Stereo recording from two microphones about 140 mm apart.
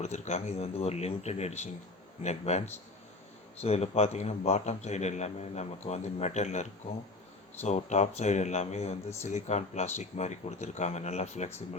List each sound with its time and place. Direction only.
0.0 s speech: 50° left (ahead or behind)